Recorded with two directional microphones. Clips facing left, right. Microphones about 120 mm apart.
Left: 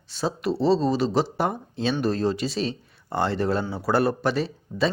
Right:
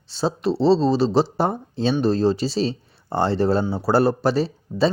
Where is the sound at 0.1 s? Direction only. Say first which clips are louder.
Right 4 dB; 30° right (ahead or behind).